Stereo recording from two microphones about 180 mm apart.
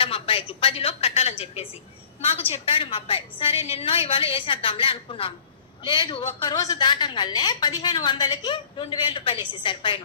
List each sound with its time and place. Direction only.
0.0 s a woman's voice: 30° left (ahead or behind)